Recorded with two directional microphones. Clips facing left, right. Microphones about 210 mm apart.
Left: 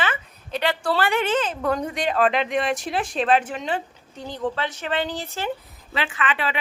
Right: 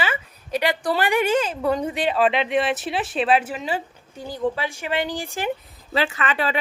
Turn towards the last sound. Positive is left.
turn(degrees=-40)  # may be behind; listen again after turning